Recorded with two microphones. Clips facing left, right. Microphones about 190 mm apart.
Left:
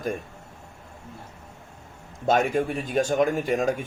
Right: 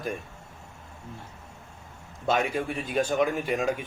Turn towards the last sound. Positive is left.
turn(degrees=45)  # may be behind; listen again after turning